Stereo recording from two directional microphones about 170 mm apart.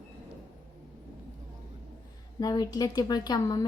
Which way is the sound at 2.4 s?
25° left (ahead or behind).